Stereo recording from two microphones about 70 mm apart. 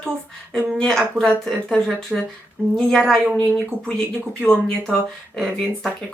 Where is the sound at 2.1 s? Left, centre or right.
Centre.